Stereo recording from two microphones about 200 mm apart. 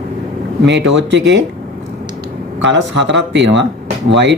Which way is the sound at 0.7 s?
60° right (ahead or behind).